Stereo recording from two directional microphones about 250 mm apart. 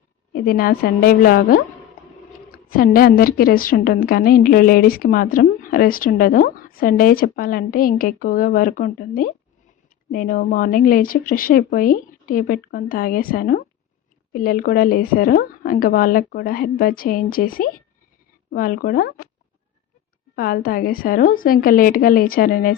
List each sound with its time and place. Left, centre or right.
0.3 s a woman's voice: left
20.3 s a woman's voice: left